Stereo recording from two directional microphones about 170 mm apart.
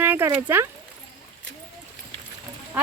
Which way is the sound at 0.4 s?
15° right (ahead or behind).